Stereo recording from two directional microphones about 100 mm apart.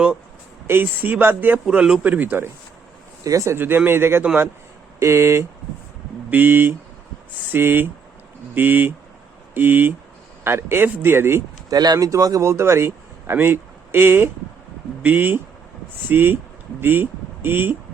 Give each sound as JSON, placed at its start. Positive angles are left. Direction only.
{"t": 0.7, "sound": "speech", "side_deg": -20}
{"t": 1.6, "sound": "speech", "side_deg": -10}
{"t": 3.2, "sound": "speech", "side_deg": -35}
{"t": 3.6, "sound": "speech", "side_deg": -20}
{"t": 11.7, "sound": "speech", "side_deg": -40}